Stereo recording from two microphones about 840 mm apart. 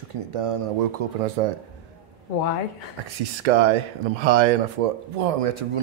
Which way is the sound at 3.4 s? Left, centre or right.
Right.